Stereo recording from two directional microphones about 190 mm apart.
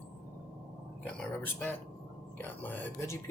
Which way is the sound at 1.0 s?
10° left (ahead or behind).